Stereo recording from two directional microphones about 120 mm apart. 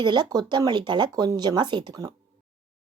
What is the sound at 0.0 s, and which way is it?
Speech, 40° right (ahead or behind).